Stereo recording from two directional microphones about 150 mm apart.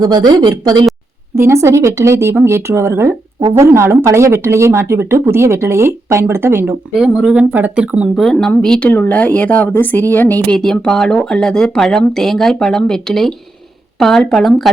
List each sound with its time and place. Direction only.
0.0 s speech: 25° right (ahead or behind); by 14.7 s centre (ahead or behind)